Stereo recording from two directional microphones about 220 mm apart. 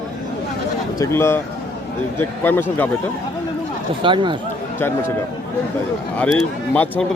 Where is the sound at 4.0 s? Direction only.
20° right (ahead or behind).